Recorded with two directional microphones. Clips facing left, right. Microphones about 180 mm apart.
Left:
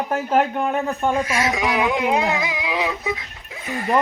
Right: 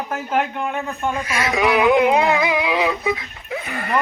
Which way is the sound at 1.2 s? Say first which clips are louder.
Right 2 dB; 60° right (ahead or behind).